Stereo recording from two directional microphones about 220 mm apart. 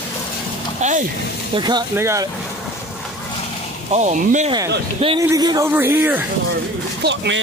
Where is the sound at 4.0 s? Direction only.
30° right (ahead or behind); by 6.2 s 10° right (ahead or behind).